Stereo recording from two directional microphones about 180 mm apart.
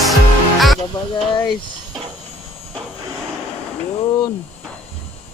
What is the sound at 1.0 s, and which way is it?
Speech, 25° left (ahead or behind).